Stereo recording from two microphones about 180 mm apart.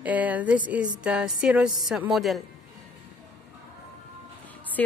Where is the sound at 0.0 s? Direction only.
10° right (ahead or behind).